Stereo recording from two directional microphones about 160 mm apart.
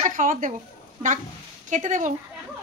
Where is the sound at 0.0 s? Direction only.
55° right (ahead or behind).